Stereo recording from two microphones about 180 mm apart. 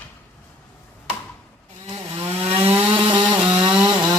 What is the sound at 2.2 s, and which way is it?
Chainsaw, 30° right (ahead or behind).